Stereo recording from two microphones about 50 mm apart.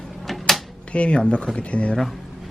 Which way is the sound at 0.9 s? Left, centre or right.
Left.